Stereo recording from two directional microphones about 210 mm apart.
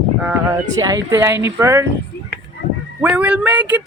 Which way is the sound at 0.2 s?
10° right (ahead or behind).